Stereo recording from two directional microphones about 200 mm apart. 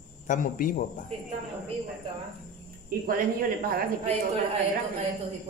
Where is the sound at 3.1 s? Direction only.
45° right (ahead or behind).